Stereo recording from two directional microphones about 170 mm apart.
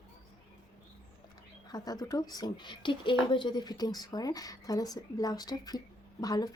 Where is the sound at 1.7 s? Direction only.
20° left (ahead or behind).